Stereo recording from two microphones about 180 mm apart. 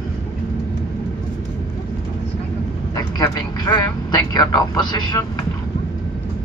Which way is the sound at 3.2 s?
20° left (ahead or behind).